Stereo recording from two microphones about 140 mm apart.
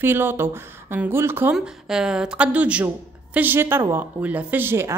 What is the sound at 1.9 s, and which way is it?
A woman's voice, 5° right (ahead or behind).